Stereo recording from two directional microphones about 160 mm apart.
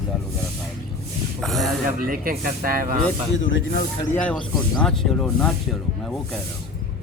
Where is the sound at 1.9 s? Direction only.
60° right (ahead or behind).